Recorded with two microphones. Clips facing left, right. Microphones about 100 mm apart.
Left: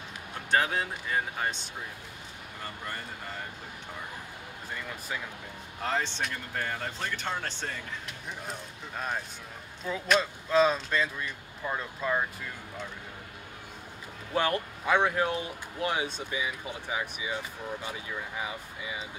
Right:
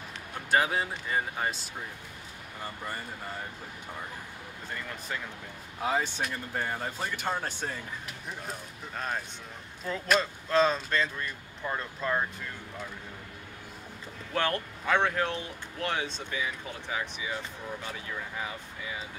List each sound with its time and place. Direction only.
0.5 s speech: 5° right (ahead or behind)
4.7 s speech: 5° left (ahead or behind)
5.8 s speech: 10° right (ahead or behind)
14.3 s speech: 10° left (ahead or behind)